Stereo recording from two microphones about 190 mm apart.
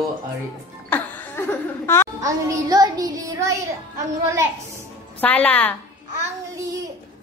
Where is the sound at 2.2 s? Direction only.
20° right (ahead or behind).